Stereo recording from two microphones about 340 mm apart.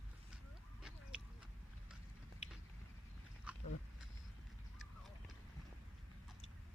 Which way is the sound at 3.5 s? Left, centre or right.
Centre.